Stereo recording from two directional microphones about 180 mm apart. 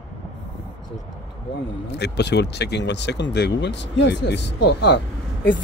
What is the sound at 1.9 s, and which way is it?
Speech, 70° left (ahead or behind).